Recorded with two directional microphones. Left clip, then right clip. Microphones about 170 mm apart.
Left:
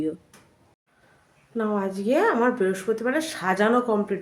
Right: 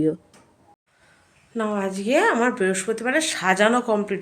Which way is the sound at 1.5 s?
Centre (ahead or behind).